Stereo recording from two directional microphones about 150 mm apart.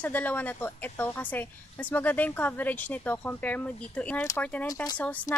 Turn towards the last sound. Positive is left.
turn(degrees=10)  # may be behind; listen again after turning